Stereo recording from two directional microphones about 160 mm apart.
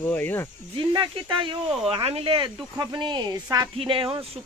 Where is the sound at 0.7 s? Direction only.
30° right (ahead or behind).